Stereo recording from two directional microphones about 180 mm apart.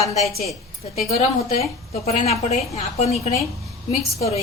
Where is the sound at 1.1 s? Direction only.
35° left (ahead or behind).